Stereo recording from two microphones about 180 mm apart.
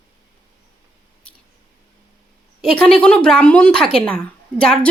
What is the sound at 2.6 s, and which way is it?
A woman's voice, 5° left (ahead or behind).